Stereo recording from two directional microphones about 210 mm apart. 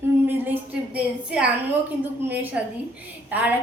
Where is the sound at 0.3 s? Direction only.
10° right (ahead or behind).